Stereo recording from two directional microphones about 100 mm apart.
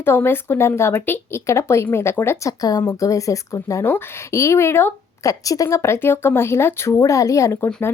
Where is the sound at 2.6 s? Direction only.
35° left (ahead or behind).